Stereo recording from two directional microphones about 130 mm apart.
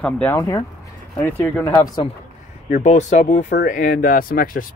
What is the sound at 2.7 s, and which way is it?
Speech, 65° left (ahead or behind).